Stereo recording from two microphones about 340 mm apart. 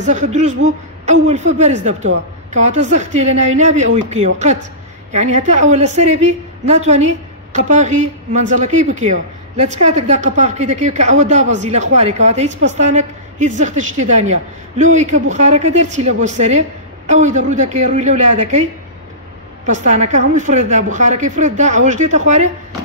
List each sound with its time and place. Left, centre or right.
0.0 s a woman's voice: right